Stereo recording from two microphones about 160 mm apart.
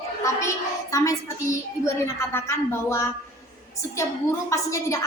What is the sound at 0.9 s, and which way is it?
A woman's voice, 20° left (ahead or behind).